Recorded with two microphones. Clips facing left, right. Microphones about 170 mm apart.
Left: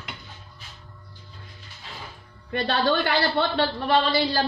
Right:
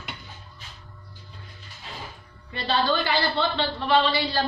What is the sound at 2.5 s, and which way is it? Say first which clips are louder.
A woman's voice: left 2 dB; 55° left (ahead or behind).